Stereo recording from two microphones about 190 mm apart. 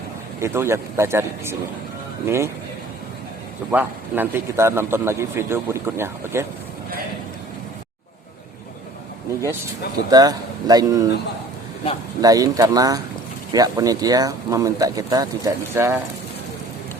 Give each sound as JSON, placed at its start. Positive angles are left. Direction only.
{"t": 0.3, "sound": "a man's voice", "side_deg": -15}
{"t": 3.7, "sound": "a man's voice", "side_deg": -10}
{"t": 10.1, "sound": "speech", "side_deg": -20}
{"t": 12.2, "sound": "speech", "side_deg": -20}